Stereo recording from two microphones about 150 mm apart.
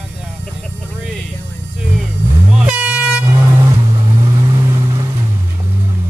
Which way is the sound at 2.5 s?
10° right (ahead or behind).